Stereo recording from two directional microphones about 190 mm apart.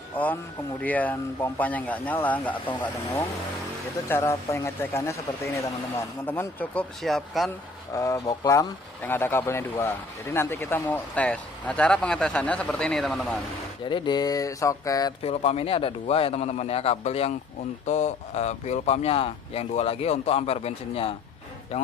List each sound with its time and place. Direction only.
0.2 s speech: 10° left (ahead or behind)
7.9 s speech: 15° left (ahead or behind); by 13.4 s centre (ahead or behind)
13.8 s speech: 25° left (ahead or behind)
15.2 s speech: 30° left (ahead or behind)